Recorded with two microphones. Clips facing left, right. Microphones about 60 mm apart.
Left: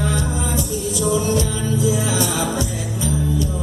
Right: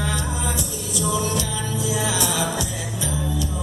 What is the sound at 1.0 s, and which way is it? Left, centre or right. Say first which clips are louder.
Music: left 4 dB; left.